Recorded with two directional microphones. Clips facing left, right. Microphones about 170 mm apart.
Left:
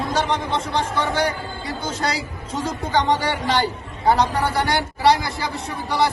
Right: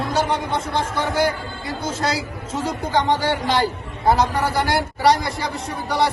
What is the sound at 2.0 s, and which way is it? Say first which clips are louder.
Speech: right 2 dB; 30° right (ahead or behind).